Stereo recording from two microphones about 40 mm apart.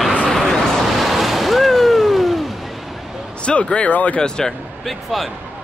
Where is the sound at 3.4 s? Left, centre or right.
Left.